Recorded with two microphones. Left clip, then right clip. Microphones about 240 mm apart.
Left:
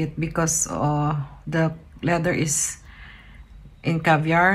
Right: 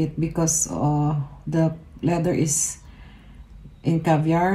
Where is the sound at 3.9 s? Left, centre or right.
Centre.